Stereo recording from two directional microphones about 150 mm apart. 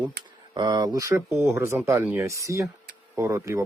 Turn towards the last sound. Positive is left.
turn(degrees=-20)  # may be behind; listen again after turning